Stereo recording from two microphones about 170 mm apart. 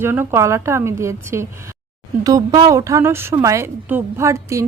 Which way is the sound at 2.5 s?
20° right (ahead or behind).